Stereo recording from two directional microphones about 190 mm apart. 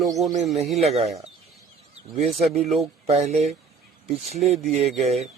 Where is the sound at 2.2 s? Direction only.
Centre (ahead or behind).